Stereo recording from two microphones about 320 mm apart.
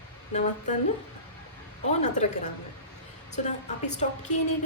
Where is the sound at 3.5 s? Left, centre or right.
Left.